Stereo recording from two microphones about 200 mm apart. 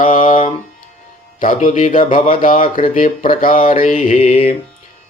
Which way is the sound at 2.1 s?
40° left (ahead or behind).